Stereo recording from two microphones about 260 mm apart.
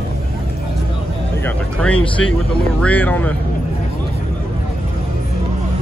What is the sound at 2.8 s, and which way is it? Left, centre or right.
Speech, centre.